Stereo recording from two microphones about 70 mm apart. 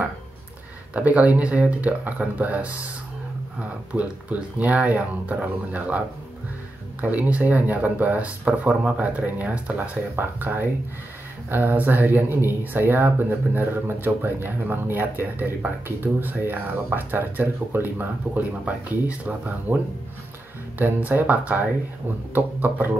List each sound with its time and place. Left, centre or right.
0.9 s speech: right